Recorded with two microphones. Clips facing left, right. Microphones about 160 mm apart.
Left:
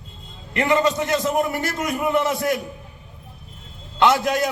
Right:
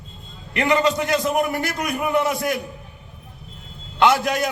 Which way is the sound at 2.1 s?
20° right (ahead or behind).